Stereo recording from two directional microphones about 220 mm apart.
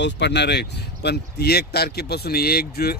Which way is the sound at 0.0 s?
50° left (ahead or behind).